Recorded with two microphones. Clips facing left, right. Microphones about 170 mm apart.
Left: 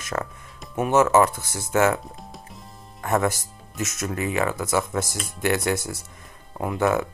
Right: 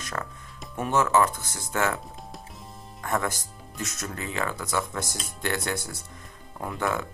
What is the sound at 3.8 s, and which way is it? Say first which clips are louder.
Speech: left 7 dB; 15° left (ahead or behind).